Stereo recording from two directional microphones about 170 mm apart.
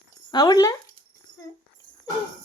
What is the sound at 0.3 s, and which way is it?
Speech, 20° left (ahead or behind).